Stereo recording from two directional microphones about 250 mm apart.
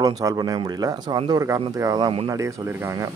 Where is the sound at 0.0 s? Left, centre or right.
Centre.